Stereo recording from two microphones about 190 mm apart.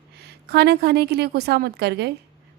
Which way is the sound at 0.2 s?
60° right (ahead or behind).